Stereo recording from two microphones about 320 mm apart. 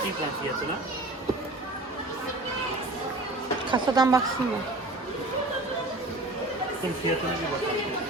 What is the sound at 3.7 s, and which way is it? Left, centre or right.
Speech, centre.